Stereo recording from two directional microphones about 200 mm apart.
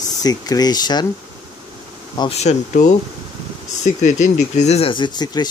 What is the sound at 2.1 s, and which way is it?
Bee, 20° left (ahead or behind).